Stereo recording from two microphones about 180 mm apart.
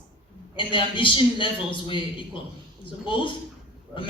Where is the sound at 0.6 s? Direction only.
30° left (ahead or behind).